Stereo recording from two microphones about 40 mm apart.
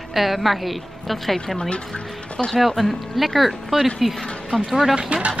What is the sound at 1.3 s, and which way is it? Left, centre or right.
Speech, centre.